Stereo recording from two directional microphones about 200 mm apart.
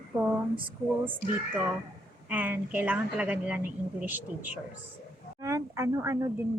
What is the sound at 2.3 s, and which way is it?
A woman's voice, 10° right (ahead or behind).